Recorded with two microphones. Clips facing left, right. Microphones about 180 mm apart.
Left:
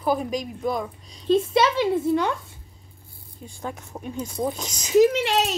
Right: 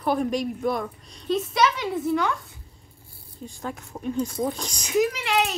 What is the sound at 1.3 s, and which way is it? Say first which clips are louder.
A woman's voice: left 3 dB; 25° left (ahead or behind).